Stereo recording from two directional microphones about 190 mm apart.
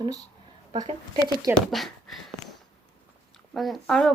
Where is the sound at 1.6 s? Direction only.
Centre (ahead or behind).